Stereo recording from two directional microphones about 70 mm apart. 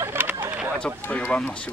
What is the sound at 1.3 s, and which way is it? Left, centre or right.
Speech, centre.